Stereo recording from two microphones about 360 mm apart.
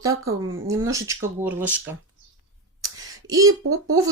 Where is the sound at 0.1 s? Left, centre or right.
Right.